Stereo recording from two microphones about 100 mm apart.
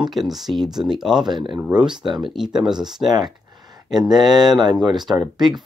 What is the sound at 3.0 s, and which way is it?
Speech, 45° right (ahead or behind).